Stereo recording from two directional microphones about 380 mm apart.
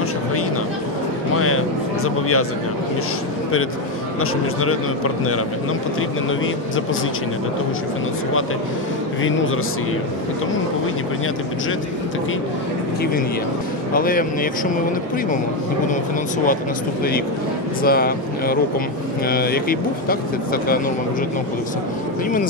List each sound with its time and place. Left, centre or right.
2.0 s a man's voice: left
4.2 s a man's voice: left
13.9 s speech: left
17.8 s speech: left